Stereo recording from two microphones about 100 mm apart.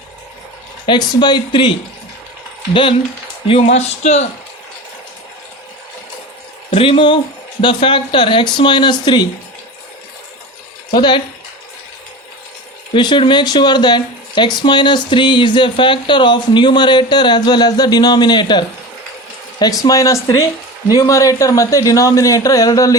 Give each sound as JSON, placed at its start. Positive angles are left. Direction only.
{"t": 0.9, "sound": "speech", "side_deg": 45}
{"t": 3.4, "sound": "speech", "side_deg": 80}
{"t": 6.7, "sound": "speech", "side_deg": 65}
{"t": 10.9, "sound": "speech", "side_deg": 50}
{"t": 12.9, "sound": "speech", "side_deg": 55}